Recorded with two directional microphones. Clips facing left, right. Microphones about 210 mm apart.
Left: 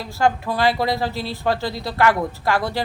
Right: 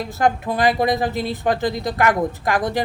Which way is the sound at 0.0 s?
20° right (ahead or behind).